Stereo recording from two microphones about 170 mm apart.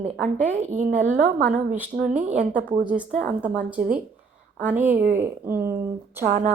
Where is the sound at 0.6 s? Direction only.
45° right (ahead or behind).